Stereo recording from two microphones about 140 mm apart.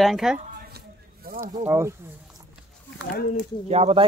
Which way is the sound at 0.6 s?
90° right.